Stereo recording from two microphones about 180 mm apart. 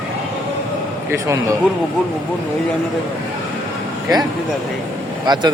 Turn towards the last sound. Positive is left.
turn(degrees=-25)  # may be behind; listen again after turning